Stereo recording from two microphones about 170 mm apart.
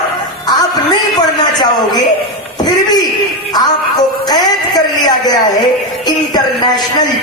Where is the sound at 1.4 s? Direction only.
25° left (ahead or behind).